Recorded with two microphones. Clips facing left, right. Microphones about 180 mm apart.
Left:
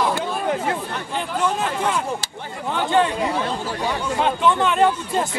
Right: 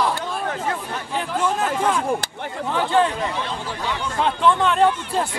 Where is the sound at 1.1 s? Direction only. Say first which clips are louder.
Even; centre (ahead or behind).